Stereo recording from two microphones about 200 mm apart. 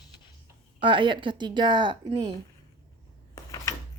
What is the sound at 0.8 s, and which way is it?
A woman's voice, 25° right (ahead or behind).